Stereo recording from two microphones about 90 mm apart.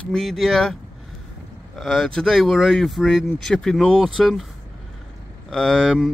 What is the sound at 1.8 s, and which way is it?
Speech, centre (ahead or behind).